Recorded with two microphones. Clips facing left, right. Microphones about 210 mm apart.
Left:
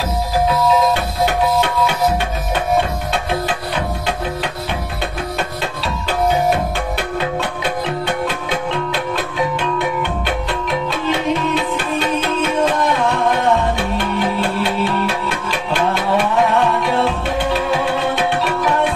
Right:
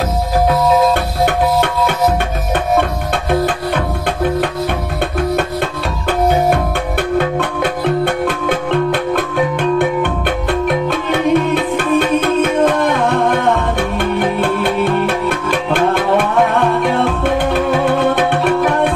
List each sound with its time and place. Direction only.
3.3 s music: 50° right (ahead or behind)
6.0 s music: 55° right (ahead or behind)